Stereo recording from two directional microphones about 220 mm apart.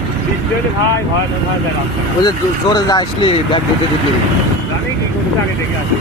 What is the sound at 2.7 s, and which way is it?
Speech, 20° left (ahead or behind).